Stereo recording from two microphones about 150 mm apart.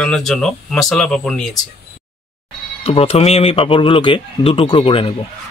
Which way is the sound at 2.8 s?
40° left (ahead or behind).